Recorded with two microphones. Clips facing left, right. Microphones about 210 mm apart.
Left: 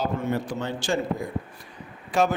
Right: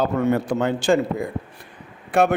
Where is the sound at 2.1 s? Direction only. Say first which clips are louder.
Right 4 dB; 60° right (ahead or behind).